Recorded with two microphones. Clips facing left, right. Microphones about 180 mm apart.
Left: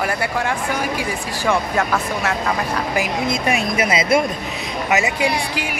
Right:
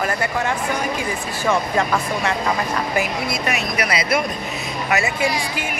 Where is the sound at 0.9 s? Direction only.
10° left (ahead or behind).